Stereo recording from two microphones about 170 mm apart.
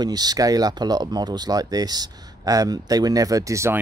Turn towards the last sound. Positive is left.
turn(degrees=-15)  # may be behind; listen again after turning